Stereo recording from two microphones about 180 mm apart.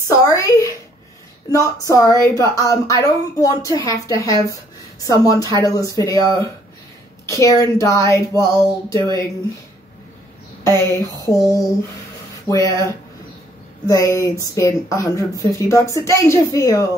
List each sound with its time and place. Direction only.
0.1 s a sound: 15° left (ahead or behind)
1.5 s a woman's voice: 20° left (ahead or behind)
10.8 s a woman's voice: 15° left (ahead or behind)
12.4 s a woman's voice: 20° left (ahead or behind)